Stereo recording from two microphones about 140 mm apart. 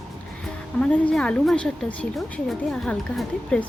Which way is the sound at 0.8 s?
5° left (ahead or behind).